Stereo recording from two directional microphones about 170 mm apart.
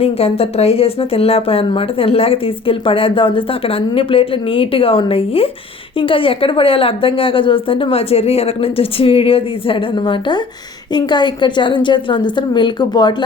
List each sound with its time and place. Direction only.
0.0 s a woman's voice: 35° left (ahead or behind)